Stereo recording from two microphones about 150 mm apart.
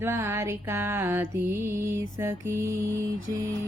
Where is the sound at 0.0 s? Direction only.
15° right (ahead or behind).